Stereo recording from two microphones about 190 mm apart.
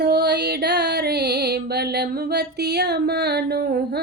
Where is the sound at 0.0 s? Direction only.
55° right (ahead or behind).